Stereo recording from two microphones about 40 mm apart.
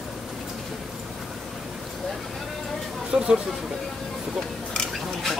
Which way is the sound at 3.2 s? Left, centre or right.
Right.